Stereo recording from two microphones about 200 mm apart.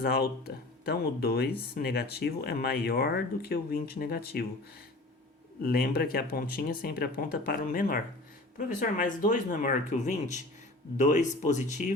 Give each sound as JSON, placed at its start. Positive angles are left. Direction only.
{"t": 0.0, "sound": "speech", "side_deg": 50}
{"t": 5.6, "sound": "speech", "side_deg": 50}